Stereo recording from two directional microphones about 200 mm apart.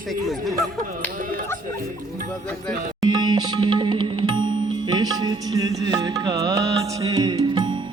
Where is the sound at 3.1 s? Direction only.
20° right (ahead or behind).